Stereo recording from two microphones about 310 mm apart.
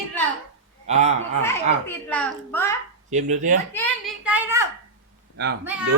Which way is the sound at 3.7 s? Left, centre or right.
Centre.